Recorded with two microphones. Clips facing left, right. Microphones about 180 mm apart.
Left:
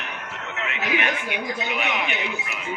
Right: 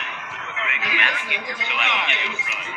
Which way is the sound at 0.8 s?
50° left (ahead or behind).